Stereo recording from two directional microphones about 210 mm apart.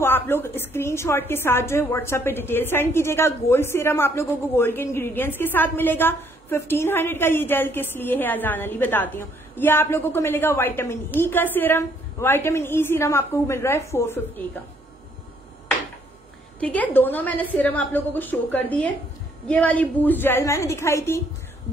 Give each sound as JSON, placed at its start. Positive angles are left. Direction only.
{"t": 0.0, "sound": "a woman's voice", "side_deg": 10}
{"t": 16.5, "sound": "a woman's voice", "side_deg": 5}